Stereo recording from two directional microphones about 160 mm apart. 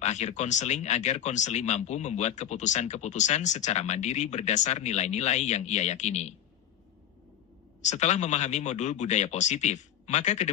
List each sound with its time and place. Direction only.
0.0 s speech: 45° left (ahead or behind)
7.8 s speech: 45° left (ahead or behind)